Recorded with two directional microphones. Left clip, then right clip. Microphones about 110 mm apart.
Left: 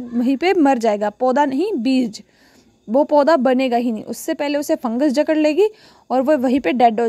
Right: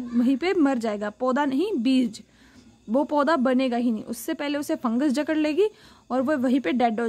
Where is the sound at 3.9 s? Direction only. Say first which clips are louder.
Left 6 dB; 50° left (ahead or behind); by 7.0 s 65° left (ahead or behind).